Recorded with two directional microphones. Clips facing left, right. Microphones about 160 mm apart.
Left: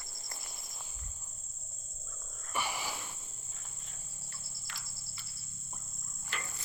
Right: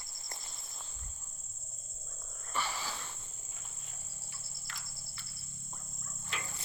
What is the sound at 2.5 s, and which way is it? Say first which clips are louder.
Wild animals: left 1 dB; 15° left (ahead or behind).